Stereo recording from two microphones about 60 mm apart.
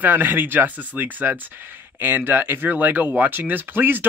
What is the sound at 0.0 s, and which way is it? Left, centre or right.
Speech, right.